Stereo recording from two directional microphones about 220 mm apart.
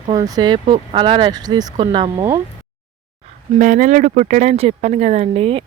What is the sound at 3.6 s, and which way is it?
Speech, 35° right (ahead or behind).